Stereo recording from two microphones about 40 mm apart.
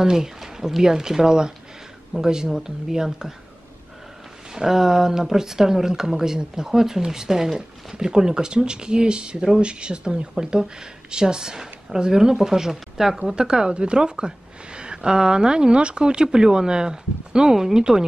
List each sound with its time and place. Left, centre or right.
0.0 s speech: centre
4.6 s a woman's voice: centre
13.2 s a woman's voice: right